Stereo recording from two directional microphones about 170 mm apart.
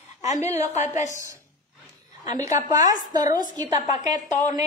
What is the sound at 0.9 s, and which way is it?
Speech, 45° left (ahead or behind).